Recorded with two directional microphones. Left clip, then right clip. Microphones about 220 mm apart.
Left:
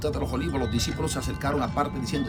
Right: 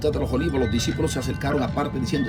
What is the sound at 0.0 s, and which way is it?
Speech, 20° left (ahead or behind).